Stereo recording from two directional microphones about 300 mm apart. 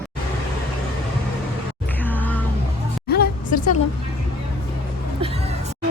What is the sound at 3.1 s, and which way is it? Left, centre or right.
Music, left.